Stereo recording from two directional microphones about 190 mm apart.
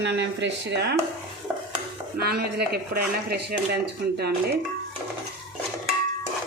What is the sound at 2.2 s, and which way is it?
Speech, 55° right (ahead or behind).